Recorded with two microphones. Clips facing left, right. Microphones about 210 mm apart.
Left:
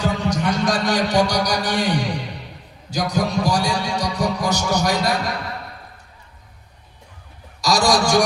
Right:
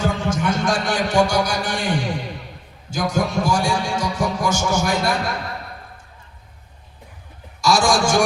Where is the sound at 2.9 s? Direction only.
40° left (ahead or behind).